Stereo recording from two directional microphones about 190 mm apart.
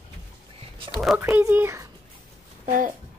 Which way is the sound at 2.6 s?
45° right (ahead or behind).